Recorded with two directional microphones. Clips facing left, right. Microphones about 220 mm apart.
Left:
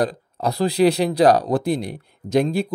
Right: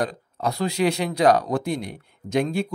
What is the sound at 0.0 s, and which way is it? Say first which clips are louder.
Speech: left 4 dB; 35° left (ahead or behind).